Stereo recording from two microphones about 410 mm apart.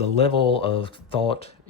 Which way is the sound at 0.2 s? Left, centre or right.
Centre.